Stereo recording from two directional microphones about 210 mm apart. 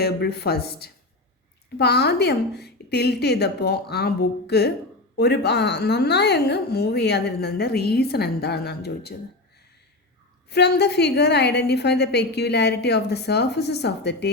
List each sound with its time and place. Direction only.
0.0 s a woman's voice: 50° left (ahead or behind)
10.5 s a woman's voice: 50° left (ahead or behind)